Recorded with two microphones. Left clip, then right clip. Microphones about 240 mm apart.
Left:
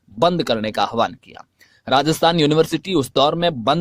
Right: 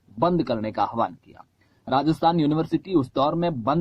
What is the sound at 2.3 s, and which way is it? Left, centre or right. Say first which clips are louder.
Speech: left 7 dB; left.